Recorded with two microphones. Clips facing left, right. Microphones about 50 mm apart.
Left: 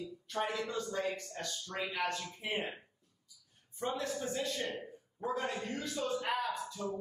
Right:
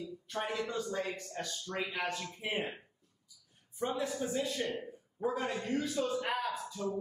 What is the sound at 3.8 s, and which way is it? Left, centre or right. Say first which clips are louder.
A man's voice: right 2 dB; centre.